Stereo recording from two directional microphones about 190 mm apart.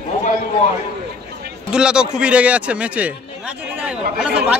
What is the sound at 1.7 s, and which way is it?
A man's voice, 5° right (ahead or behind).